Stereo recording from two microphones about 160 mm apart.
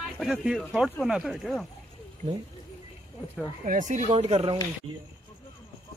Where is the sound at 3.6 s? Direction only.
50° right (ahead or behind).